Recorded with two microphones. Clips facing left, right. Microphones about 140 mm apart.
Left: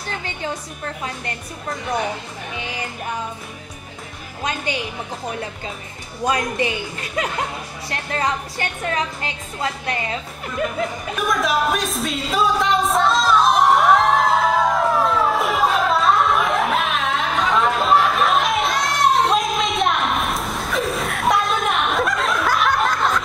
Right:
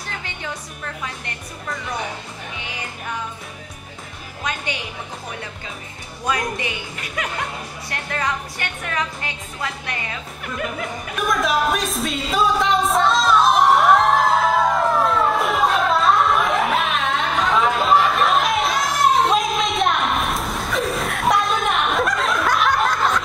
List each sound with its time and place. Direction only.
6.2 s a woman's voice: 30° left (ahead or behind)
11.1 s music: centre (ahead or behind)